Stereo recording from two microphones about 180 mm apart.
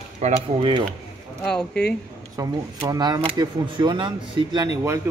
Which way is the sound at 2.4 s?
20° right (ahead or behind).